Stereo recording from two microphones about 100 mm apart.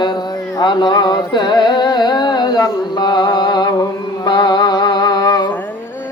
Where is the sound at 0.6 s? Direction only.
50° left (ahead or behind).